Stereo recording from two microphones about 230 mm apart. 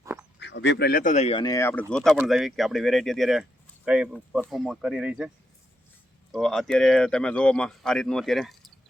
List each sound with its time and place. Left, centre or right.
0.0 s a sound: centre
0.3 s speech: left; by 5.3 s centre
6.3 s speech: centre